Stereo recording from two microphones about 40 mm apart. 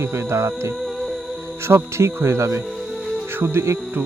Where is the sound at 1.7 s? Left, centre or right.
Right.